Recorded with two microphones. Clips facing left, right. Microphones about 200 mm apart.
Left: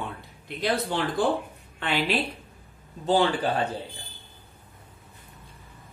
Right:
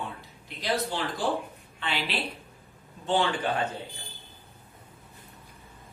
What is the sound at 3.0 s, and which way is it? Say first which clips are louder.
Speech: left 4 dB; 35° left (ahead or behind).